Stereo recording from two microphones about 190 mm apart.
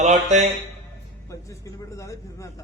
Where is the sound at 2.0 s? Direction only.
15° left (ahead or behind).